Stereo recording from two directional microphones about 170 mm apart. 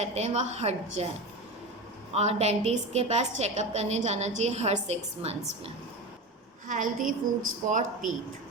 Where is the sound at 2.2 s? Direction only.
40° right (ahead or behind).